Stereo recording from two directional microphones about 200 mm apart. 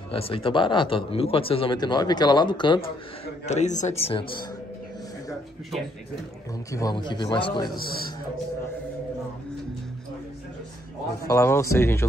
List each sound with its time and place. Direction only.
0.1 s a man's voice: 25° left (ahead or behind)
3.4 s a man's voice: 35° left (ahead or behind)
6.7 s a man's voice: 20° left (ahead or behind)
11.2 s speech: 15° left (ahead or behind)